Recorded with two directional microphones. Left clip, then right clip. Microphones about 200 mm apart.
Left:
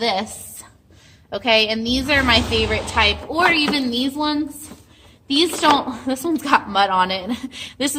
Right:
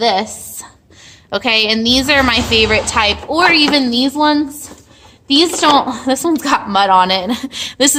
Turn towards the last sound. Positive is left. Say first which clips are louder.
# right 10 dB
turn(degrees=-50)  # may be behind; listen again after turning